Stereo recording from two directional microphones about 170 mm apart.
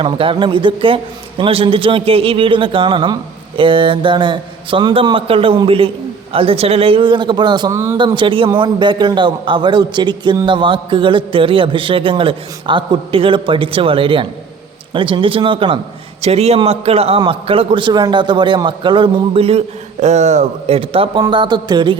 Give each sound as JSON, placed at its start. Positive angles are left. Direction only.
{"t": 0.0, "sound": "a man's voice", "side_deg": -30}